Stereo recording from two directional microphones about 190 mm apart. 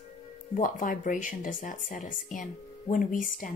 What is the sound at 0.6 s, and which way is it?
Speech, 45° left (ahead or behind).